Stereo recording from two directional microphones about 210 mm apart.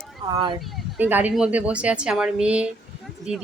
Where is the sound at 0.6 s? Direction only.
5° right (ahead or behind).